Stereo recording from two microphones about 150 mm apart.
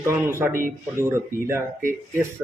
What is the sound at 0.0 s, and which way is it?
Speech, 15° right (ahead or behind).